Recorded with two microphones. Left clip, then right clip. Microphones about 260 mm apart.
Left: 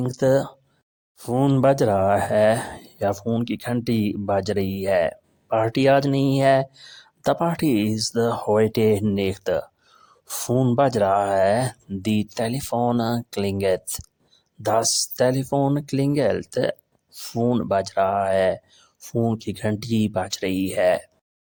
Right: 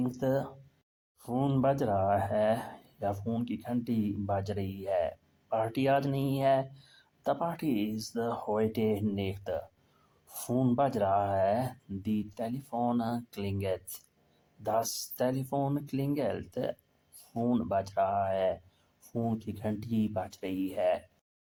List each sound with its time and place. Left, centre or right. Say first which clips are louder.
0.0 s speech: left 11 dB; left